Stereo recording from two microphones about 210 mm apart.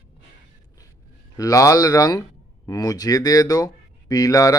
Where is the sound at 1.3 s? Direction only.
15° left (ahead or behind).